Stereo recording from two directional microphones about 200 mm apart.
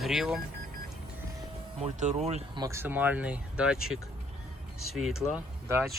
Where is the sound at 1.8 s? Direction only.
35° right (ahead or behind).